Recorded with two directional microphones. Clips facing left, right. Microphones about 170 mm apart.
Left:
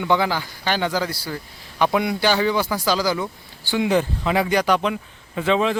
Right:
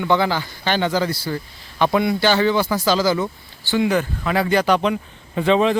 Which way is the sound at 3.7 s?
25° left (ahead or behind).